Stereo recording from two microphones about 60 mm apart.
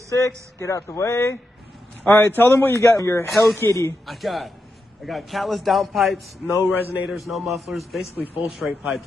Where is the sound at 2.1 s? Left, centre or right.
Left.